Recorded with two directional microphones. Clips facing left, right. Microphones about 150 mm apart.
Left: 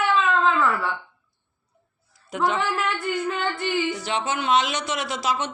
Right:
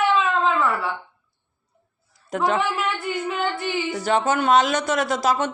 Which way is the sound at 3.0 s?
15° right (ahead or behind).